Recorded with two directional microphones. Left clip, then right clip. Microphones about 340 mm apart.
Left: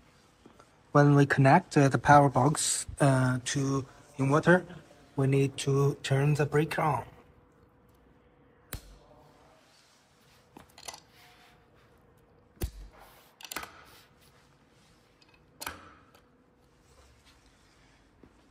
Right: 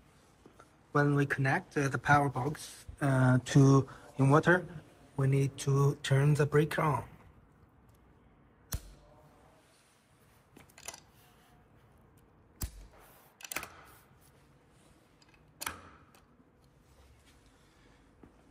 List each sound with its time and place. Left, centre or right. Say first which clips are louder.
0.6 s speech: left 6 dB; centre